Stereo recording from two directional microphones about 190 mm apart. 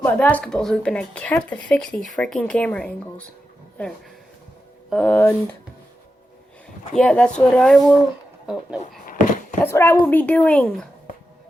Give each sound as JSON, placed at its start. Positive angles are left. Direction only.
{"t": 0.0, "sound": "speech", "side_deg": 10}
{"t": 4.9, "sound": "speech", "side_deg": 5}
{"t": 6.9, "sound": "speech", "side_deg": 5}
{"t": 9.0, "sound": "a sound", "side_deg": 45}
{"t": 9.6, "sound": "speech", "side_deg": 15}